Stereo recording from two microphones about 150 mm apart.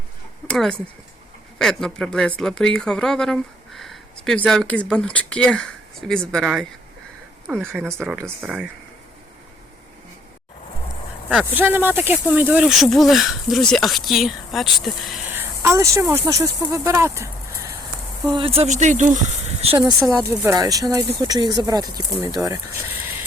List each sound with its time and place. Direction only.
0.4 s speech: 5° left (ahead or behind)
11.3 s speech: 10° right (ahead or behind)
12.6 s speech: centre (ahead or behind)
15.3 s speech: 15° right (ahead or behind)
18.3 s speech: 40° right (ahead or behind); by 19.2 s 55° right (ahead or behind)
20.0 s speech: 20° right (ahead or behind)